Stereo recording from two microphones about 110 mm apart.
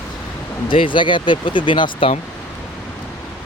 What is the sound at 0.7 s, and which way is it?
Speech, 50° left (ahead or behind).